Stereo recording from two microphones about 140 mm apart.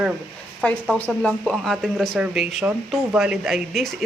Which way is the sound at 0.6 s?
10° left (ahead or behind).